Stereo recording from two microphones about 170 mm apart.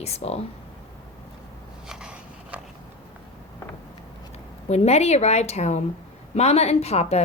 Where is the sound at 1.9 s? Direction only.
5° right (ahead or behind).